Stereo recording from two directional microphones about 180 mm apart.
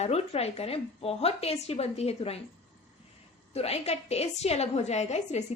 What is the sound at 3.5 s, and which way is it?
A woman's voice, 35° left (ahead or behind).